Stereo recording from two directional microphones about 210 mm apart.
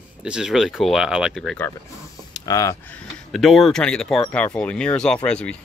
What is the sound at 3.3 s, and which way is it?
Speech, centre (ahead or behind).